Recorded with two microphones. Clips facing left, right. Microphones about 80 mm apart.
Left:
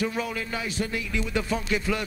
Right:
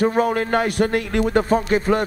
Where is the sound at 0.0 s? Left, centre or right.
Right.